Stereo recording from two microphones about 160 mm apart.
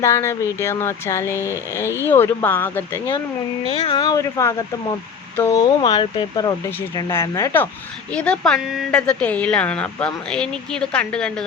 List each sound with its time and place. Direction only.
0.0 s speech: 15° left (ahead or behind)
1.4 s speech: 15° right (ahead or behind)
2.0 s speech: 15° left (ahead or behind)
3.8 s speech: 25° left (ahead or behind)
6.9 s speech: 15° left (ahead or behind)